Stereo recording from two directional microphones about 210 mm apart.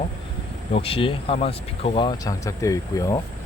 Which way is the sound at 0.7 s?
25° left (ahead or behind).